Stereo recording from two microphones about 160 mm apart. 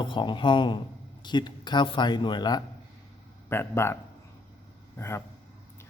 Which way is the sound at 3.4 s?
15° left (ahead or behind).